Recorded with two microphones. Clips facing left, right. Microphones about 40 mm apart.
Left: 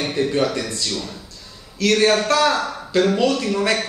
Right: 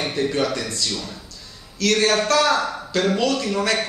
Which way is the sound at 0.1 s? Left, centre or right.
Centre.